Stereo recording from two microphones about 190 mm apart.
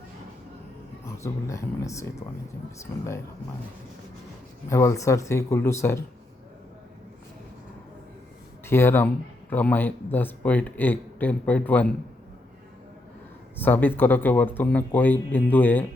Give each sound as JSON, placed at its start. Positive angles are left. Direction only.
{"t": 1.0, "sound": "speech", "side_deg": 15}
{"t": 4.7, "sound": "speech", "side_deg": 15}
{"t": 8.6, "sound": "speech", "side_deg": 10}
{"t": 13.6, "sound": "speech", "side_deg": 10}